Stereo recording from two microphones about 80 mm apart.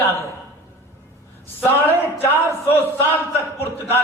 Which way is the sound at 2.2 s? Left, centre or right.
Left.